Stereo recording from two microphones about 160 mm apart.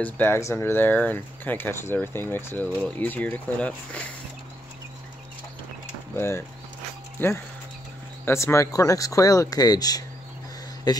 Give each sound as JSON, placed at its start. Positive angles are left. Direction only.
{"t": 0.0, "sound": "speech", "side_deg": 15}
{"t": 6.1, "sound": "speech", "side_deg": 15}
{"t": 8.3, "sound": "speech", "side_deg": 15}